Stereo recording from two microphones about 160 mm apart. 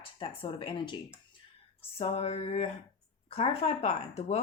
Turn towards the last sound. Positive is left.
turn(degrees=45)  # may be behind; listen again after turning